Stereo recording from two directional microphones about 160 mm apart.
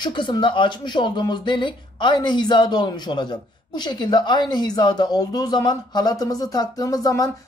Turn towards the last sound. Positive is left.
turn(degrees=25)  # may be behind; listen again after turning